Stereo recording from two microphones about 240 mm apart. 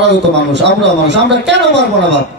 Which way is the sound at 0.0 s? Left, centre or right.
Right.